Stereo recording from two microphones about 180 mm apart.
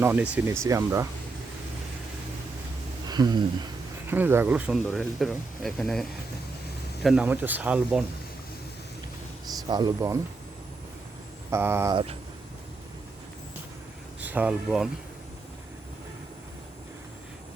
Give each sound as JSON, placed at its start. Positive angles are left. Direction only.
{"t": 0.0, "sound": "speech", "side_deg": -10}
{"t": 3.1, "sound": "speech", "side_deg": -25}
{"t": 4.1, "sound": "speech", "side_deg": -10}
{"t": 9.6, "sound": "speech", "side_deg": -25}
{"t": 11.5, "sound": "speech", "side_deg": -15}
{"t": 14.2, "sound": "speech", "side_deg": -10}